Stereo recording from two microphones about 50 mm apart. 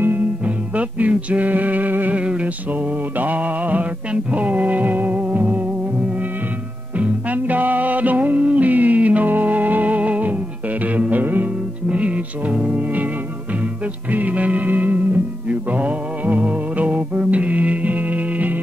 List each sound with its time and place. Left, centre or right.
0.7 s a sound: right
2.1 s music: right
3.2 s mantra: right
4.1 s music: right
7.0 s music: right
11.9 s music: right
14.1 s music of bollywood: right
15.4 s music: right